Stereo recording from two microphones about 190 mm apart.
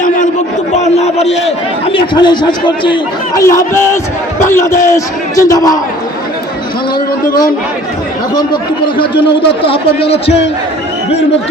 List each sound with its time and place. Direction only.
0.8 s a man's voice: 35° left (ahead or behind); by 5.8 s 20° left (ahead or behind)
9.0 s a man's voice: 30° left (ahead or behind)